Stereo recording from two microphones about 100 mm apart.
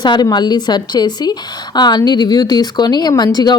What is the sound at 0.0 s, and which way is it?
Speech, 45° left (ahead or behind).